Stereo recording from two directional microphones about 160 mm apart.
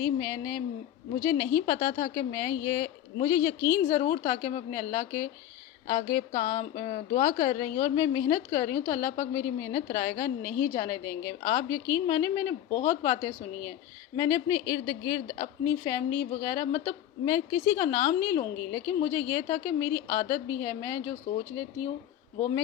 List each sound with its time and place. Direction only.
0.0 s a woman's voice: 25° left (ahead or behind)